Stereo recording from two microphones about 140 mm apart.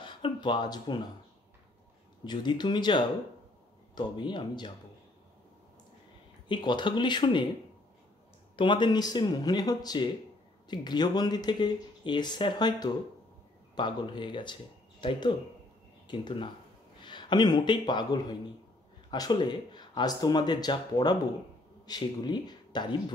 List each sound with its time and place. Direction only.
0.0 s a sound: 35° left (ahead or behind)
2.2 s speech: 30° left (ahead or behind)
6.5 s speech: 35° left (ahead or behind)
8.5 s a man's voice: 35° left (ahead or behind)